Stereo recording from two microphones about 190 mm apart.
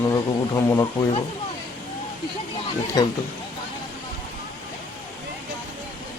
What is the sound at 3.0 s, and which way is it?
Speech, 20° left (ahead or behind).